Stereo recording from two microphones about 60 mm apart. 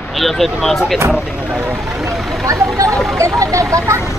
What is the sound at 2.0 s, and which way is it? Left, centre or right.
Speech, centre.